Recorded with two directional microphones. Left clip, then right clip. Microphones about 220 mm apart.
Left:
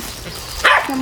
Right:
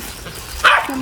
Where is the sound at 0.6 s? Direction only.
40° left (ahead or behind).